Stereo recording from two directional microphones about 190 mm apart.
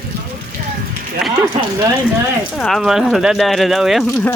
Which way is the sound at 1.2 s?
Centre (ahead or behind).